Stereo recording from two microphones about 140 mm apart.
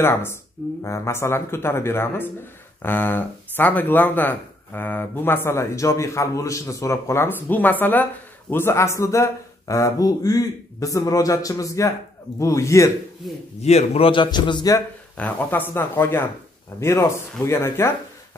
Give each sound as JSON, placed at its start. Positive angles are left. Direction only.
{"t": 0.0, "sound": "speech", "side_deg": 15}
{"t": 13.6, "sound": "a man's voice", "side_deg": 50}
{"t": 15.1, "sound": "speech", "side_deg": 10}
{"t": 17.5, "sound": "speech", "side_deg": 20}